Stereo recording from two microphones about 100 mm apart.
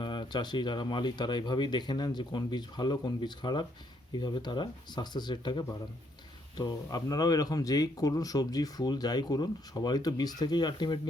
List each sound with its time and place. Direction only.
0.0 s speech: 50° left (ahead or behind)